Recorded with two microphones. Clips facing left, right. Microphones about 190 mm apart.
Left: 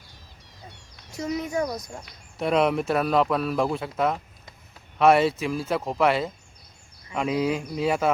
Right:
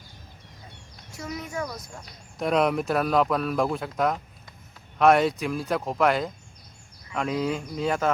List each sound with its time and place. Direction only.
1.1 s speech: 20° left (ahead or behind)
2.4 s speech: centre (ahead or behind)